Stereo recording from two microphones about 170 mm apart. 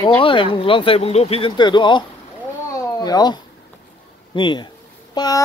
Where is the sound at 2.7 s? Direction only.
20° left (ahead or behind).